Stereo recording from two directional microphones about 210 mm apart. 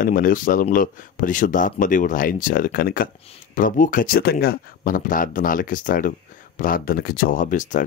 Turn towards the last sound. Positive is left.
turn(degrees=40)  # may be behind; listen again after turning